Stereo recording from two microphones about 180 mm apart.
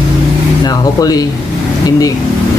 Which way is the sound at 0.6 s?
20° left (ahead or behind).